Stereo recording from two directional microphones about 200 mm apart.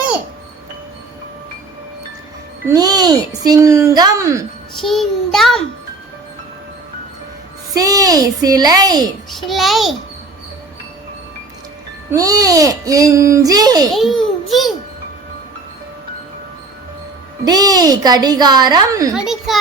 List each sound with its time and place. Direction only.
2.6 s speech: 20° right (ahead or behind)
4.8 s child singing: centre (ahead or behind)
7.7 s a woman's voice: 15° right (ahead or behind)
9.3 s child singing: centre (ahead or behind)
12.1 s speech: 15° right (ahead or behind)
13.9 s child singing: centre (ahead or behind)
17.4 s a woman's voice: 20° right (ahead or behind)
19.1 s child singing: centre (ahead or behind)